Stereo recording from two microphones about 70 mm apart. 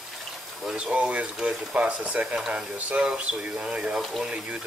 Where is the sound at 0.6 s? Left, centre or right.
Centre.